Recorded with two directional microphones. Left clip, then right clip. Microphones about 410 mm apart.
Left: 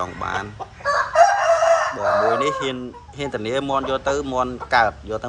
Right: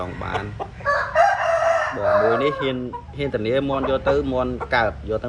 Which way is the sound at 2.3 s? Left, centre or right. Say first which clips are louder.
Even; centre.